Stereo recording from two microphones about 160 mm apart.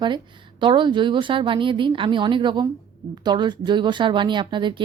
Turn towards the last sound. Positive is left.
turn(degrees=-30)  # may be behind; listen again after turning